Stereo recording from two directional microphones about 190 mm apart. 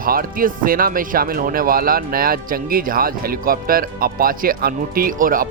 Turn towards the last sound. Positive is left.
turn(degrees=-45)  # may be behind; listen again after turning